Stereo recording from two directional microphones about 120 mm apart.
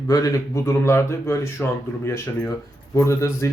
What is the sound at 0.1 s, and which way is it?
Speech, 30° left (ahead or behind).